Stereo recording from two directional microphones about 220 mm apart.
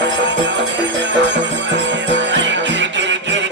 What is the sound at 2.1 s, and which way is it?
Music, 55° right (ahead or behind).